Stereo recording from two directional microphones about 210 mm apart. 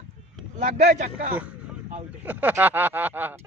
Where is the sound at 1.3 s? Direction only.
5° right (ahead or behind).